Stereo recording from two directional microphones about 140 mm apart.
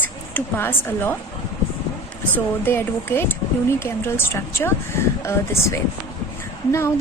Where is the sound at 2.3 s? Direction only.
15° left (ahead or behind).